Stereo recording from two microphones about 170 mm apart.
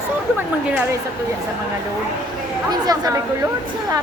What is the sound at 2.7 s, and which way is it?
Speech, 20° right (ahead or behind).